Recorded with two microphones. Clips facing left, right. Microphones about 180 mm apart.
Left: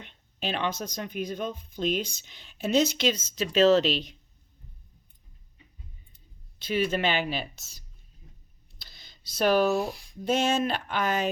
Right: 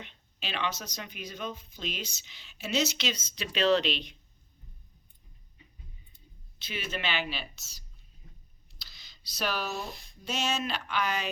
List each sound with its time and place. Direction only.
0.0 s speech: 50° left (ahead or behind)
6.7 s speech: 50° left (ahead or behind)
8.8 s a sound: 50° left (ahead or behind)
10.2 s speech: 50° left (ahead or behind)